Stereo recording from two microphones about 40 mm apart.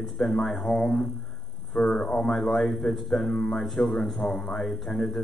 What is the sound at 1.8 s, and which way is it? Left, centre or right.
Speech, left.